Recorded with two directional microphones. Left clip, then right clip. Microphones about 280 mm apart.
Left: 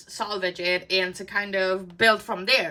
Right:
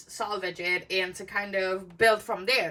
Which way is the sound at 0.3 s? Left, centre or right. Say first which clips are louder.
Left 4 dB; centre.